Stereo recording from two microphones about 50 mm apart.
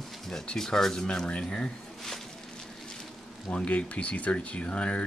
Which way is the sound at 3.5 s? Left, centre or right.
Left.